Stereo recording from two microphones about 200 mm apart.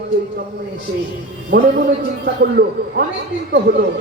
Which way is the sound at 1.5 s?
55° right (ahead or behind).